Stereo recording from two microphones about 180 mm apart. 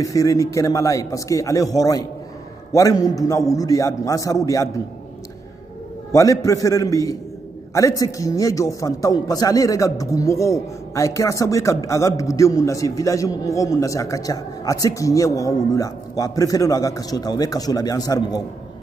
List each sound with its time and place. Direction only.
0.0 s a man's voice: 20° left (ahead or behind)
6.1 s a man's voice: 20° left (ahead or behind)